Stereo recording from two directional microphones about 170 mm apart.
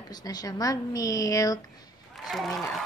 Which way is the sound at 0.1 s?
25° left (ahead or behind).